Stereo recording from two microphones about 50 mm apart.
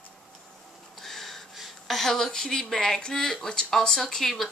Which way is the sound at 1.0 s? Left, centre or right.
Centre.